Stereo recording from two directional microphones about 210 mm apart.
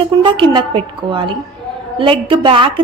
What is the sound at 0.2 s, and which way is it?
A woman's voice, 20° right (ahead or behind).